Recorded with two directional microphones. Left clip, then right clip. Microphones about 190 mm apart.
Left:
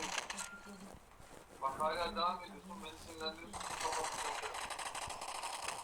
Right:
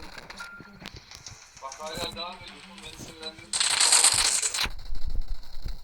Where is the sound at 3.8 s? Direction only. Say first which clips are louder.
Right 16 dB; 50° right (ahead or behind).